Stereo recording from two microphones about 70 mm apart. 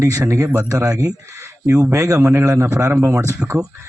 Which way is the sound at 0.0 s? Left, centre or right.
Right.